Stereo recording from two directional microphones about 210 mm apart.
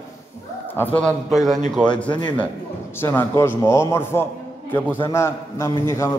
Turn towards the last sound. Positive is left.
turn(degrees=15)  # may be behind; listen again after turning